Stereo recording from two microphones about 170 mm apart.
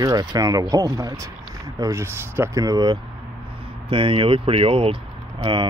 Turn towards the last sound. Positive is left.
turn(degrees=-30)  # may be behind; listen again after turning